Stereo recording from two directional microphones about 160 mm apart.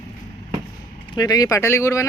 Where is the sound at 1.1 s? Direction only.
25° left (ahead or behind).